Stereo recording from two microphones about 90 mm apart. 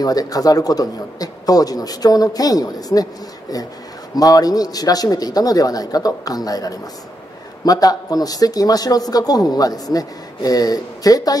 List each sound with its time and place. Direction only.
0.0 s speech: 45° left (ahead or behind)
4.2 s speech: 45° left (ahead or behind)